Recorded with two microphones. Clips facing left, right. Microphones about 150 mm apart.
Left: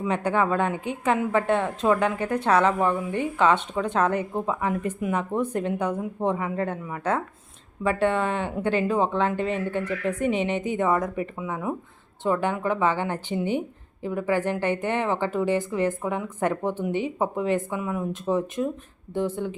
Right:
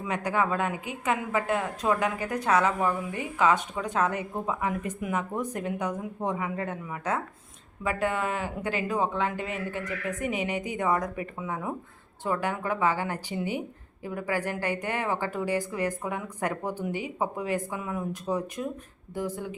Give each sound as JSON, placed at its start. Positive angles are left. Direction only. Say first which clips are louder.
{"t": 0.1, "sound": "speech", "louder": "left 3 dB", "side_deg": 30}